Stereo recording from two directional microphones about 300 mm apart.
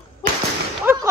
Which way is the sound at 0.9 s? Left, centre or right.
Centre.